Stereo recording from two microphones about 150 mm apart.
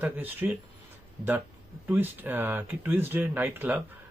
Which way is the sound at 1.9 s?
15° right (ahead or behind).